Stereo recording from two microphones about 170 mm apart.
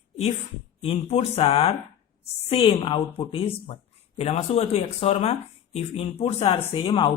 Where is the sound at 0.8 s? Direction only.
35° left (ahead or behind).